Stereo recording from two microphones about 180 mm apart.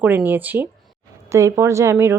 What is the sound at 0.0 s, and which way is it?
A woman's voice, 10° right (ahead or behind).